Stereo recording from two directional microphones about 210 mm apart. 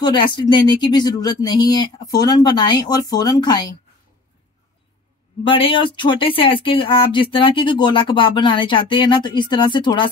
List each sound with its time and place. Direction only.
0.0 s speech: 20° left (ahead or behind)
5.4 s speech: 25° left (ahead or behind)